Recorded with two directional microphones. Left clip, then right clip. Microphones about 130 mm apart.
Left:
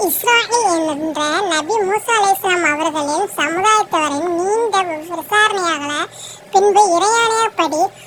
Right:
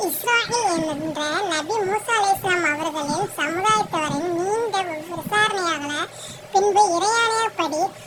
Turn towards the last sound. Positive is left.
turn(degrees=55)  # may be behind; listen again after turning